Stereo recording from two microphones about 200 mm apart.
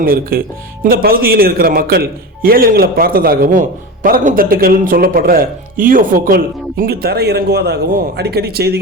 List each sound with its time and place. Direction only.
0.0 s a man's voice: 45° right (ahead or behind)